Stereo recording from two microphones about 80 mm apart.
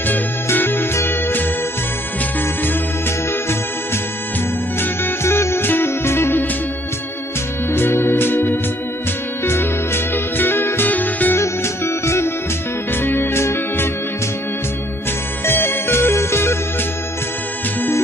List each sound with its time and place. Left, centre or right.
0.0 s music: left
4.7 s music: left
7.7 s music: left
11.4 s music: left
15.4 s music: left